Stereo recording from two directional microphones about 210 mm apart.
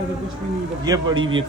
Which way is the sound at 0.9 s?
20° right (ahead or behind).